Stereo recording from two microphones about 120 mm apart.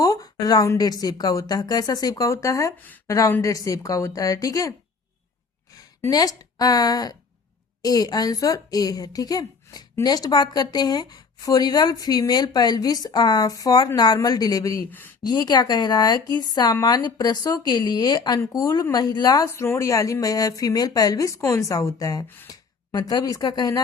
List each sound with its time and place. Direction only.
0.0 s a woman's voice: 30° left (ahead or behind)
2.8 s speech: 15° left (ahead or behind)
6.1 s a woman's voice: 35° left (ahead or behind)
19.6 s speech: 20° left (ahead or behind)